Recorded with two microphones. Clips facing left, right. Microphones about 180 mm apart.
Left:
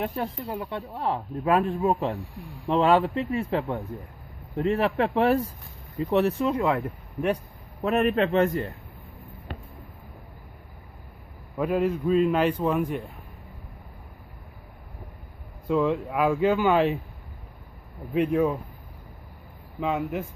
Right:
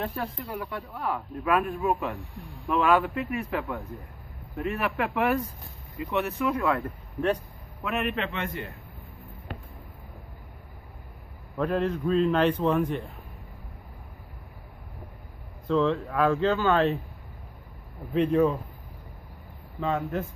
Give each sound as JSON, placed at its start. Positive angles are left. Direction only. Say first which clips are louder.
{"t": 0.0, "sound": "speech", "louder": "left 3 dB", "side_deg": 25}
{"t": 7.8, "sound": "a man's voice", "louder": "left 7 dB", "side_deg": 40}
{"t": 11.5, "sound": "a man's voice", "louder": "left 2 dB", "side_deg": 10}
{"t": 15.6, "sound": "a man's voice", "louder": "left 1 dB", "side_deg": 10}
{"t": 18.1, "sound": "a man's voice", "louder": "right 1 dB", "side_deg": 10}
{"t": 19.8, "sound": "a man's voice", "louder": "left 1 dB", "side_deg": 10}